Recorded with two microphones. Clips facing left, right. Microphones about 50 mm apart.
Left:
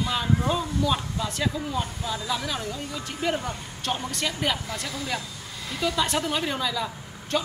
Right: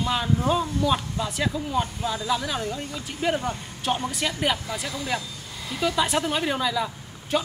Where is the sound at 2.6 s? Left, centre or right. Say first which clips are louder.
Right 3 dB; right.